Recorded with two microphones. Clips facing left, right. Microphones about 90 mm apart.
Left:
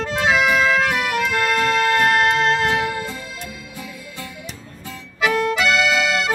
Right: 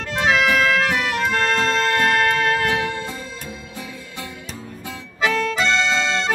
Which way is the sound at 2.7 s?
15° left (ahead or behind).